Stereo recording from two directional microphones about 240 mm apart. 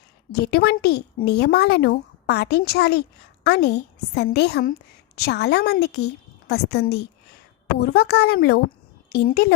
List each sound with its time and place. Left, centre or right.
0.3 s a woman's voice: left